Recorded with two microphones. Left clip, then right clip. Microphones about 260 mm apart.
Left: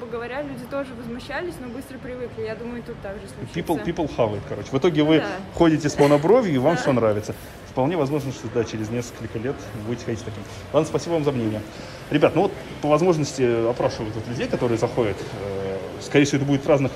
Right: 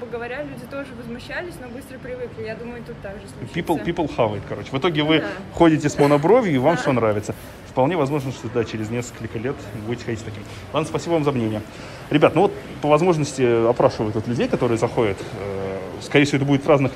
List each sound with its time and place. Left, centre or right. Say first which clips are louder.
0.2 s speech: even; left
3.8 s a man's voice: right 1 dB; centre
16.1 s a man's voice: right 2 dB; centre